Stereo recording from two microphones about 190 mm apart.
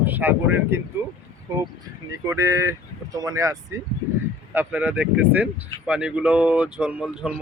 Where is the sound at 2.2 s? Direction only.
15° right (ahead or behind).